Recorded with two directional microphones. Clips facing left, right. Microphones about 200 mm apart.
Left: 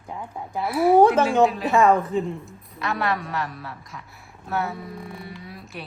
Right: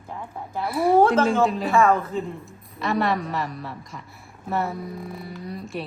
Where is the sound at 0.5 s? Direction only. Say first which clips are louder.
Left 2 dB; centre (ahead or behind).